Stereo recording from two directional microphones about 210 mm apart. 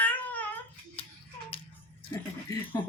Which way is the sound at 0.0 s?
5° left (ahead or behind).